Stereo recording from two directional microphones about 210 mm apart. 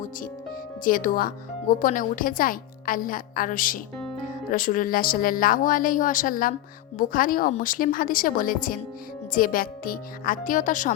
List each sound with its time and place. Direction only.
0.9 s a woman's voice: 40° left (ahead or behind)